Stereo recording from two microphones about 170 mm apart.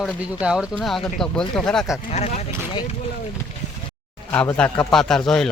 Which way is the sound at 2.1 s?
40° left (ahead or behind).